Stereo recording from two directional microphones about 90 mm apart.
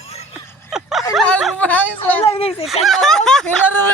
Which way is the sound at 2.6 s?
Centre (ahead or behind).